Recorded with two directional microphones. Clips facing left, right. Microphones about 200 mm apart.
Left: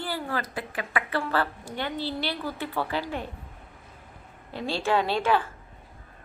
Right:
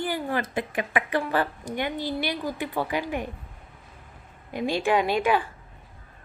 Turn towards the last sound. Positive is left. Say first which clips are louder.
# right 1 dB
turn(degrees=-15)  # may be behind; listen again after turning